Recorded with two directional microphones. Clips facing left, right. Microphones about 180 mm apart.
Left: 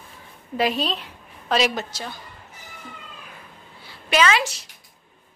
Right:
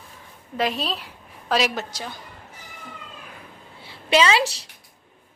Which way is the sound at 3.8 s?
30° right (ahead or behind).